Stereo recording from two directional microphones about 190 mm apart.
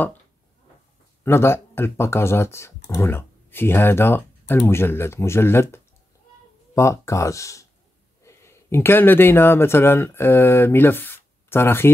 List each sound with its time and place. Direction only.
1.2 s speech: 15° left (ahead or behind)